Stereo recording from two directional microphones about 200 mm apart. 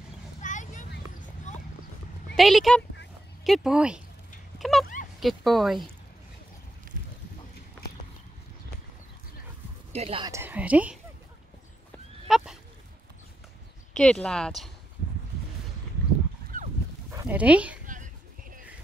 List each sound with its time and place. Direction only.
0.4 s a sound: 40° left (ahead or behind)
2.3 s speech: centre (ahead or behind)
9.9 s speech: 25° right (ahead or behind)
10.3 s a woman's voice: 10° right (ahead or behind)
12.3 s speech: centre (ahead or behind)
13.9 s speech: 5° left (ahead or behind)
16.5 s dog: 45° right (ahead or behind)
17.1 s speech: 10° right (ahead or behind)
17.8 s a sound: 40° right (ahead or behind)